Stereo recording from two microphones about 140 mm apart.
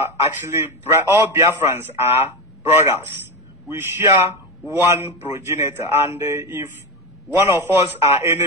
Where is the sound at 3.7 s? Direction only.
15° right (ahead or behind).